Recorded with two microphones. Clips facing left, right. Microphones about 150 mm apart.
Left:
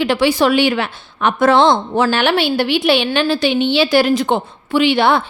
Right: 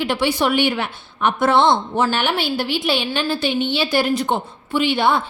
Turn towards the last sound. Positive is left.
turn(degrees=80)